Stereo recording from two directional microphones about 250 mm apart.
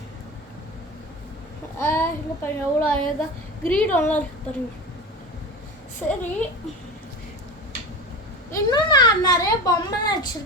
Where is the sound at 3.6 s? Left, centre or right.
Centre.